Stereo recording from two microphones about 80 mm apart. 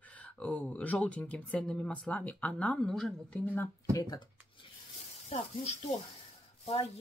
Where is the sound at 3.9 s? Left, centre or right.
Left.